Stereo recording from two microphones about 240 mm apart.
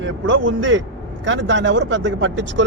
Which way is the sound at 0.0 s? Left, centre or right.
Right.